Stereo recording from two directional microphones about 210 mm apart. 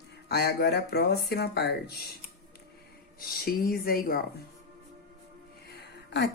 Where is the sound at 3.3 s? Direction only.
45° left (ahead or behind).